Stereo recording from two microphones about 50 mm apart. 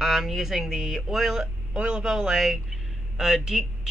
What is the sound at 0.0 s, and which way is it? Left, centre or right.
Speech, centre.